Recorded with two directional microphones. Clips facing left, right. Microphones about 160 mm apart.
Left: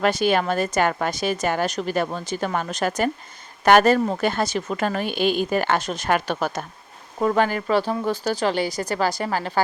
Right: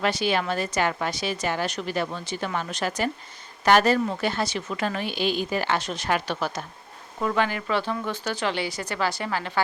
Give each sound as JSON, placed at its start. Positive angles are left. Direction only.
{"t": 0.0, "sound": "a woman's voice", "side_deg": 50}